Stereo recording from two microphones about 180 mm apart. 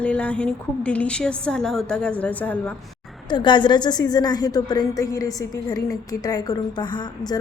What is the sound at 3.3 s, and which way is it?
A woman's voice, 25° left (ahead or behind).